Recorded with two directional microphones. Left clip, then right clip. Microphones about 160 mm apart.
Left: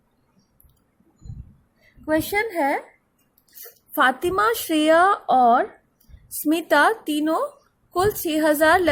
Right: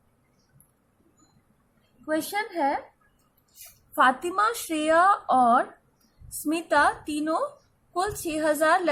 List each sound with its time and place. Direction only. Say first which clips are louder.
2.0 s a woman's voice: left 6 dB; 40° left (ahead or behind)
3.9 s a woman's voice: left 2 dB; 40° left (ahead or behind)